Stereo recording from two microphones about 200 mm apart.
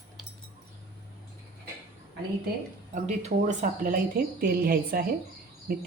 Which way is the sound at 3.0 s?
35° right (ahead or behind).